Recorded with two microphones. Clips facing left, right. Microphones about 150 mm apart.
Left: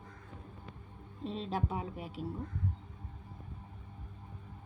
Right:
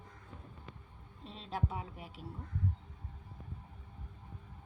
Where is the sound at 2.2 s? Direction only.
90° left.